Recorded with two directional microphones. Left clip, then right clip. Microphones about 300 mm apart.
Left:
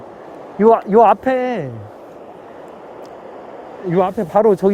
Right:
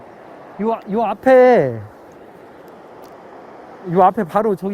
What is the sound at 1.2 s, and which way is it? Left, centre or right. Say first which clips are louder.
Speech: right 9 dB; centre.